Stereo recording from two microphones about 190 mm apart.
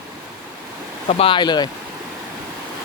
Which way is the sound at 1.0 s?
30° left (ahead or behind).